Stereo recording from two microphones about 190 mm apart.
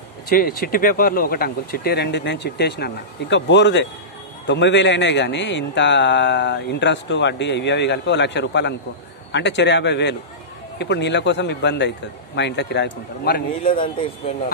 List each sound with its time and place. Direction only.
0.3 s speech: 50° left (ahead or behind)
13.7 s speech: 30° left (ahead or behind)